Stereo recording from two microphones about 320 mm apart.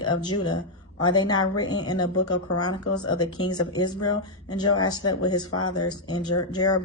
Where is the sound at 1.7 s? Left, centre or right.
Left.